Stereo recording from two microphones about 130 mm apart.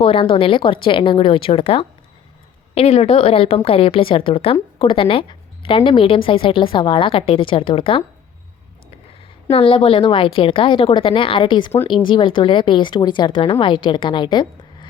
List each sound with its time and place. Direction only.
0.0 s a woman's voice: 45° left (ahead or behind)
9.5 s speech: 45° left (ahead or behind)